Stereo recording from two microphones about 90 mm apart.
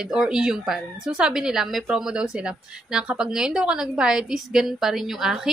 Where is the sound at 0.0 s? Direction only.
5° right (ahead or behind).